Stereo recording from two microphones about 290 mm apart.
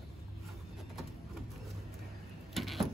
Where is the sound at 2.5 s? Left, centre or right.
Centre.